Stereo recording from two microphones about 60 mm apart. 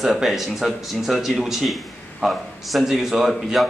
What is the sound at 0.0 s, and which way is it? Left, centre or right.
A man's voice, centre.